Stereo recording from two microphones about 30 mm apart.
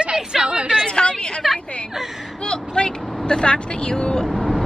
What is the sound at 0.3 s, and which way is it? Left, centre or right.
Speech, right.